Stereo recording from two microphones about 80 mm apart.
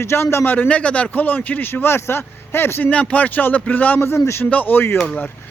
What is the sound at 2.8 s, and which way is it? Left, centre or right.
A man's voice, centre.